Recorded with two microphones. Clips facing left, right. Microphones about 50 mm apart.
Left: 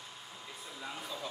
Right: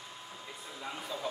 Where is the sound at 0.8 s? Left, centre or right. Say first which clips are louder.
Right 3 dB; centre.